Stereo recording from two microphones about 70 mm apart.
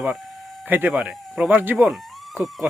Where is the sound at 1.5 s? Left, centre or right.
Right.